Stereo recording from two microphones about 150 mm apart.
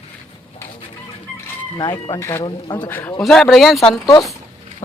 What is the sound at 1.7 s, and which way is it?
Speech, 30° left (ahead or behind).